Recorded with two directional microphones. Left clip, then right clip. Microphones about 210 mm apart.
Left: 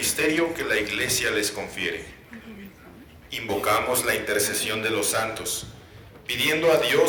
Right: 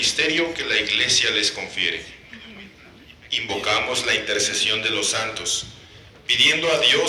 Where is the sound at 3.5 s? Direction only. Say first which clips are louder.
Left 1 dB; 65° left (ahead or behind).